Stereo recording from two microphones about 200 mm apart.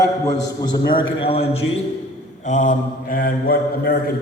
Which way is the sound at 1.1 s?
30° left (ahead or behind).